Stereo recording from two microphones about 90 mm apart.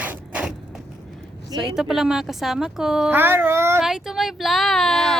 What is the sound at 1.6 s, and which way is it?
A woman's voice, 5° right (ahead or behind).